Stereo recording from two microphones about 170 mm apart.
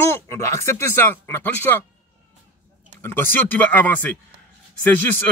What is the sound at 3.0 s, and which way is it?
Speech, 15° left (ahead or behind).